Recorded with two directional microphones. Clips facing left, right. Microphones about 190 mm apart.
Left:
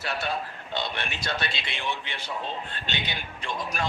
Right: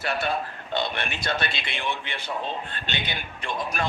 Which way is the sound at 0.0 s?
55° right (ahead or behind).